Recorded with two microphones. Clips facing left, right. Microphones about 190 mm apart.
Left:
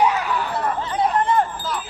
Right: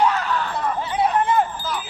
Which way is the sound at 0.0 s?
10° left (ahead or behind).